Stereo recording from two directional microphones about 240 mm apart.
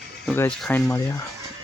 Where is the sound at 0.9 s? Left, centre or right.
Centre.